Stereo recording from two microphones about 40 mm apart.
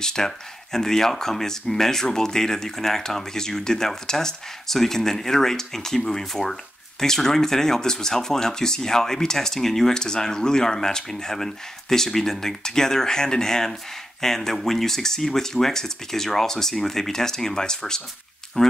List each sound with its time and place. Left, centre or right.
0.0 s speech: centre